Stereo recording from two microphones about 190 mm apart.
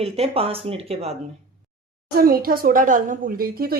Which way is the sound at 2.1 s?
50° right (ahead or behind).